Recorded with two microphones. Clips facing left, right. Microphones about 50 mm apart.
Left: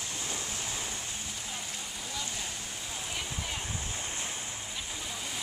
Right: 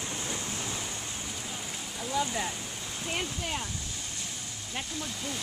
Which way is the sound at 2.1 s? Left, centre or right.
Right.